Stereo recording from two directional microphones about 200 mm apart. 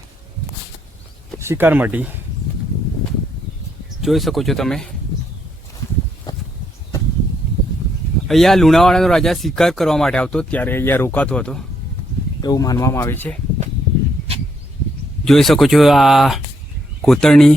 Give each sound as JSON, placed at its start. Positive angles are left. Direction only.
{"t": 1.4, "sound": "speech", "side_deg": -10}
{"t": 4.0, "sound": "speech", "side_deg": 0}
{"t": 6.3, "sound": "a sound", "side_deg": 20}
{"t": 8.3, "sound": "speech", "side_deg": 0}
{"t": 12.4, "sound": "speech", "side_deg": 20}
{"t": 15.2, "sound": "speech", "side_deg": 0}